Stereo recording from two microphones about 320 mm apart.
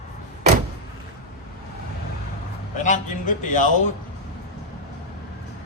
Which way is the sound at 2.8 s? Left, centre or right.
Left.